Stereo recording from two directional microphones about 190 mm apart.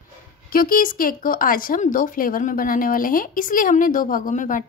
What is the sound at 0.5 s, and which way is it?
Speech, 50° left (ahead or behind).